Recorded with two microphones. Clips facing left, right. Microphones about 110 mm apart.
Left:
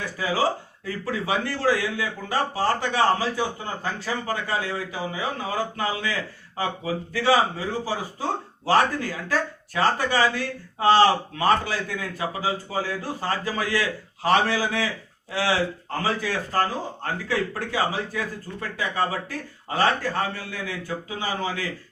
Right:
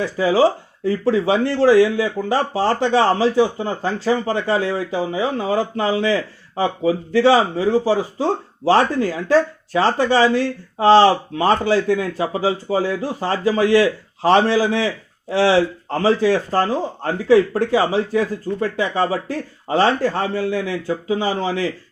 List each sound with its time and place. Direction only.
0.0 s speech: 25° right (ahead or behind)